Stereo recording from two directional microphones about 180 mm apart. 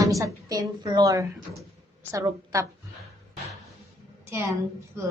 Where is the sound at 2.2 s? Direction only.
20° right (ahead or behind).